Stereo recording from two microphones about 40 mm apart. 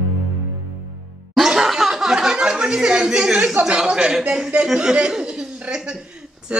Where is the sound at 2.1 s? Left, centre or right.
Centre.